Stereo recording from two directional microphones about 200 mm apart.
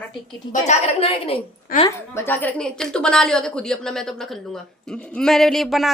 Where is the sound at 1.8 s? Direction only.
15° left (ahead or behind).